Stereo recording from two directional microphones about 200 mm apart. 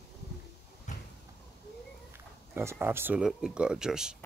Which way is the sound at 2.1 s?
10° right (ahead or behind).